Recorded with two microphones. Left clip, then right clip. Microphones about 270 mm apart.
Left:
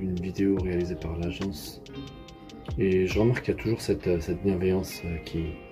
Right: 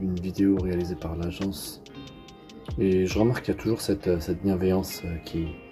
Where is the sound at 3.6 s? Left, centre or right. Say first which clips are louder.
Right 3 dB; centre.